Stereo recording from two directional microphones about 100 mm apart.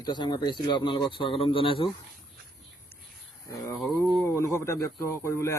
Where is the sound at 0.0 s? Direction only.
50° left (ahead or behind).